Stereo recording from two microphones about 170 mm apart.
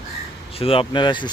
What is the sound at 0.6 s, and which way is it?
Speech, 30° left (ahead or behind).